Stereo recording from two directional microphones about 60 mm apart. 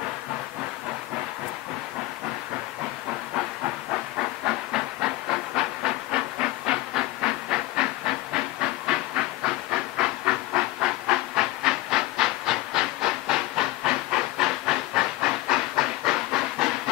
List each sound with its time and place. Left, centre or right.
4.5 s hiss: centre
7.2 s train: centre
8.8 s hiss: centre